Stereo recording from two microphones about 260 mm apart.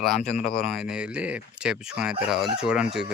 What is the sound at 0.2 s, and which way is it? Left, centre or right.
Speech, left.